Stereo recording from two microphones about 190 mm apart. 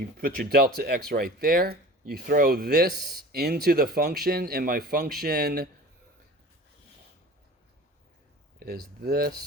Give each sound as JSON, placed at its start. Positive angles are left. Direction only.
{"t": 0.2, "sound": "speech", "side_deg": -50}
{"t": 8.5, "sound": "speech", "side_deg": -55}